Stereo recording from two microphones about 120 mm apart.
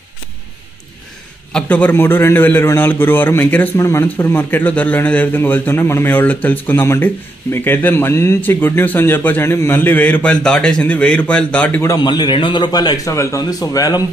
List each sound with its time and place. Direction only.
1.5 s a man's voice: 10° left (ahead or behind)
11.8 s a man's voice: 30° left (ahead or behind)